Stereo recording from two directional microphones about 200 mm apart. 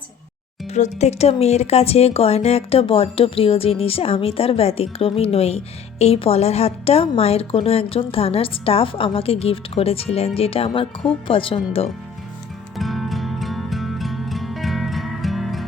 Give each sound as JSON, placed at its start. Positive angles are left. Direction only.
{"t": 0.7, "sound": "speech", "side_deg": 35}
{"t": 12.7, "sound": "music", "side_deg": 0}